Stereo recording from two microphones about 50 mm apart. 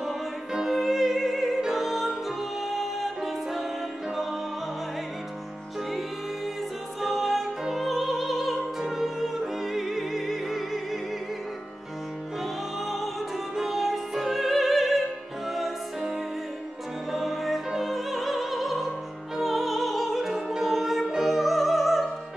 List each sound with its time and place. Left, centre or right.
0.0 s music: centre
5.9 s music: centre
12.8 s music: centre
17.1 s music: centre
17.6 s opera: centre
19.3 s music: centre